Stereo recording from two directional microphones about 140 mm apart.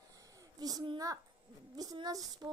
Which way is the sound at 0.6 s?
25° right (ahead or behind).